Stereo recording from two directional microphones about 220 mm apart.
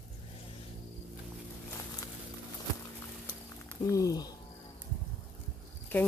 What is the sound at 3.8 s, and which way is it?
Speech, 15° left (ahead or behind).